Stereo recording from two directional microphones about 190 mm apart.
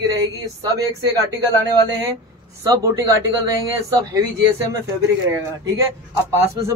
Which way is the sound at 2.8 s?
15° right (ahead or behind).